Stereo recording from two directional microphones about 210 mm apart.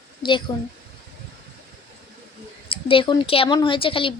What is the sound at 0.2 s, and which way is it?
Speech, 20° left (ahead or behind).